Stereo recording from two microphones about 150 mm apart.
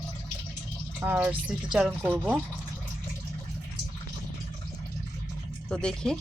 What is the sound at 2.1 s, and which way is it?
Speech, 5° left (ahead or behind).